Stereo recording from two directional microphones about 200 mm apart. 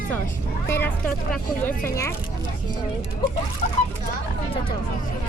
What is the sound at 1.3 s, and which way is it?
Speech, 10° left (ahead or behind).